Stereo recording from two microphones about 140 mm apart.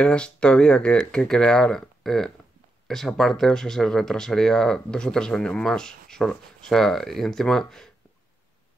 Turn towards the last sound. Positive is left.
turn(degrees=5)  # may be behind; listen again after turning